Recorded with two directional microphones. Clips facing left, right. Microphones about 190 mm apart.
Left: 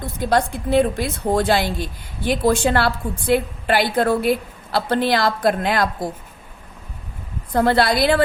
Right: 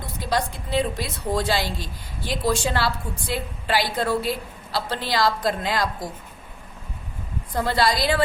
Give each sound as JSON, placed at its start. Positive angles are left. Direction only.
{"t": 0.2, "sound": "a woman's voice", "side_deg": 55}
{"t": 7.5, "sound": "a woman's voice", "side_deg": 60}